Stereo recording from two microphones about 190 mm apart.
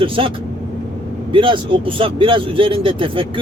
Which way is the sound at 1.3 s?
25° right (ahead or behind).